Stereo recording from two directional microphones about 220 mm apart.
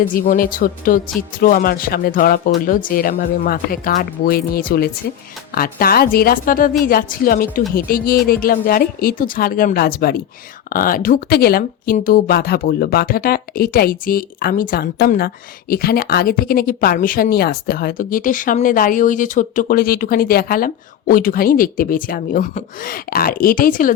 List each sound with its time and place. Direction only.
0.1 s a woman's voice: 40° left (ahead or behind)